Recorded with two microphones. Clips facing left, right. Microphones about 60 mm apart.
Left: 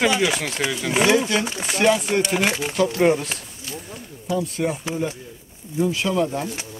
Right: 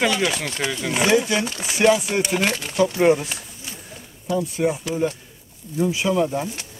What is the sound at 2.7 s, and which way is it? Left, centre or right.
Speech, centre.